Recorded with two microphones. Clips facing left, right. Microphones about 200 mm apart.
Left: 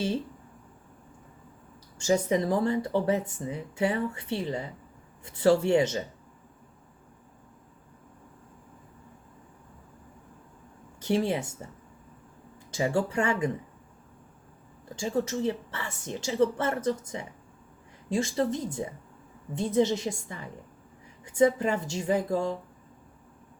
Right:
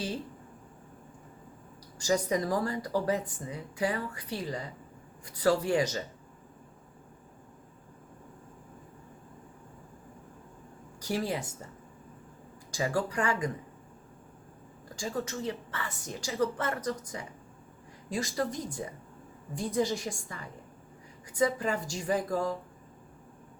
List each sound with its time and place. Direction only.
2.0 s speech: 25° left (ahead or behind)
11.0 s a woman's voice: 25° left (ahead or behind)
12.7 s speech: 25° left (ahead or behind)
14.9 s speech: 25° left (ahead or behind)